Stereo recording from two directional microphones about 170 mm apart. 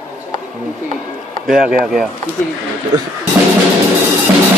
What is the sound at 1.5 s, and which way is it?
Speech, 55° right (ahead or behind).